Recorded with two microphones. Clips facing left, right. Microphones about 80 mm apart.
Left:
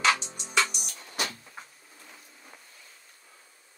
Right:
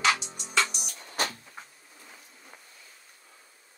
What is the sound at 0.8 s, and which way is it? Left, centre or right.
Music, right.